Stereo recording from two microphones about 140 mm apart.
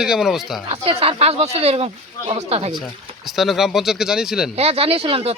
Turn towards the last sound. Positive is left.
turn(degrees=-45)  # may be behind; listen again after turning